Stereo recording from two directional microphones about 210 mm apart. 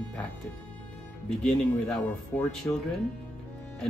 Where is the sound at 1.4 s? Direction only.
5° left (ahead or behind).